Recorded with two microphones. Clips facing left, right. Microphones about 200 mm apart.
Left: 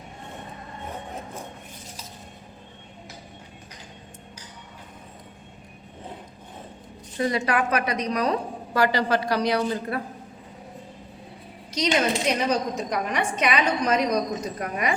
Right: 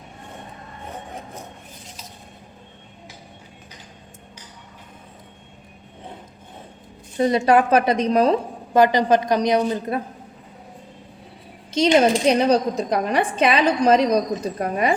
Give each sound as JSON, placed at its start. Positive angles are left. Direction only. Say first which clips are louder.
{"t": 7.2, "sound": "a woman's voice", "louder": "right 7 dB", "side_deg": -25}
{"t": 11.7, "sound": "a woman's voice", "louder": "right 7 dB", "side_deg": -30}